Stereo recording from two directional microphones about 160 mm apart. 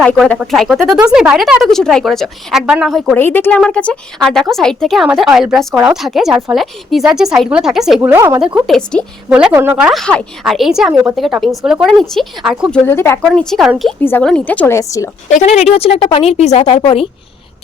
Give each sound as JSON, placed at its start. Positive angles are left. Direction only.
{"t": 0.0, "sound": "a woman's voice", "side_deg": 5}
{"t": 3.2, "sound": "a woman's voice", "side_deg": 15}
{"t": 8.5, "sound": "a woman's voice", "side_deg": 0}
{"t": 9.3, "sound": "a woman's voice", "side_deg": -10}
{"t": 12.7, "sound": "a woman's voice", "side_deg": 15}
{"t": 13.2, "sound": "a woman's voice", "side_deg": 5}
{"t": 14.0, "sound": "a woman's voice", "side_deg": 15}
{"t": 15.3, "sound": "speech", "side_deg": 45}